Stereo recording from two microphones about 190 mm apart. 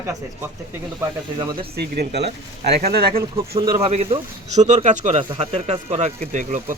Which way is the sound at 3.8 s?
30° right (ahead or behind).